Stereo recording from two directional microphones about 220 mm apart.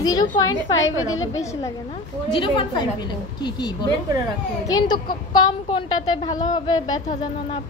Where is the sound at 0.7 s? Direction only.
60° left (ahead or behind).